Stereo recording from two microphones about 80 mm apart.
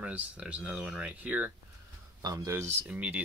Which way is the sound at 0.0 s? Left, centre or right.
Centre.